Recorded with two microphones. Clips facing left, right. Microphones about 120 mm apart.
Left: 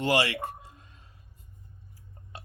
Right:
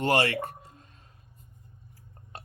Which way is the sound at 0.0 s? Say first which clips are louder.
Right 1 dB; 50° right (ahead or behind).